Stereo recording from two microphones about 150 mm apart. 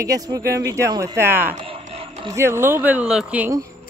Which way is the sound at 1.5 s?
35° right (ahead or behind).